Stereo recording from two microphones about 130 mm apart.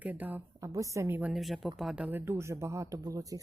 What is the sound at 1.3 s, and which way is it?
Speech, centre (ahead or behind).